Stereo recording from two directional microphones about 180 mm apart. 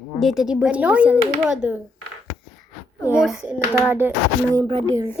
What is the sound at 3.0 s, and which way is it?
Speech, 5° right (ahead or behind).